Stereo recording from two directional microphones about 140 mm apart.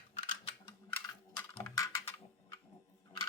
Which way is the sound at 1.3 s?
25° left (ahead or behind).